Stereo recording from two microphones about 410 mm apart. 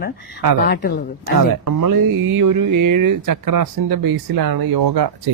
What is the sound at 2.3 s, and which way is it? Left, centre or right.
Speech, right.